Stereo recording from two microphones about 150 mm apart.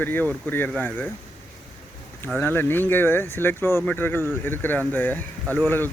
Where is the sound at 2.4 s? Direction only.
15° left (ahead or behind).